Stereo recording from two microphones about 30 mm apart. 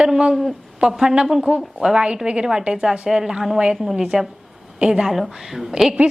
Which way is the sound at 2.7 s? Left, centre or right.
Right.